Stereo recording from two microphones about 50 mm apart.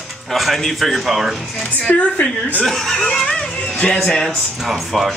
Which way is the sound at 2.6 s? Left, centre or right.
Centre.